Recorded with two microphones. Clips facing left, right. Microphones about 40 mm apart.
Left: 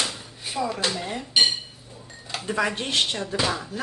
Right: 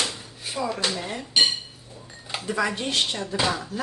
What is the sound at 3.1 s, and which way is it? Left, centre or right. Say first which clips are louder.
Speech: left 1 dB; centre.